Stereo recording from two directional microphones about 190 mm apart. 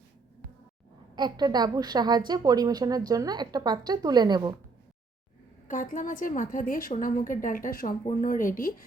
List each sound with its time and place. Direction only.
1.1 s a woman's voice: 20° right (ahead or behind)
5.6 s a woman's voice: 45° left (ahead or behind)